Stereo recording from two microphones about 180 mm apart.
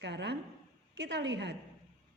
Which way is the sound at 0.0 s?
75° right (ahead or behind).